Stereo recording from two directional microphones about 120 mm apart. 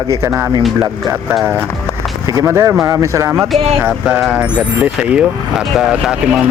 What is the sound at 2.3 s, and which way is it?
Speech, 25° right (ahead or behind).